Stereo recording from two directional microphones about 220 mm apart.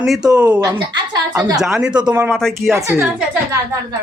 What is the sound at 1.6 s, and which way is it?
A woman's voice, centre (ahead or behind).